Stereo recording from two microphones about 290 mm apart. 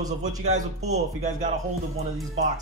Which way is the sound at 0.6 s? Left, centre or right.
Right.